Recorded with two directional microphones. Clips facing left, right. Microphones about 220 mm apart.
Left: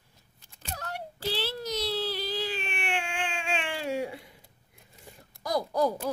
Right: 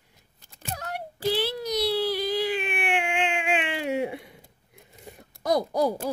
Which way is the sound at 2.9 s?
20° right (ahead or behind).